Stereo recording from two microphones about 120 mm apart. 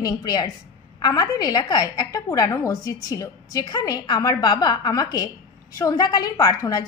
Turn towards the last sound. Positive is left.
turn(degrees=30)  # may be behind; listen again after turning